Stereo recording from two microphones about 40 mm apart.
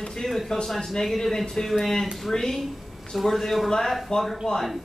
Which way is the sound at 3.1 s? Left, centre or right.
Centre.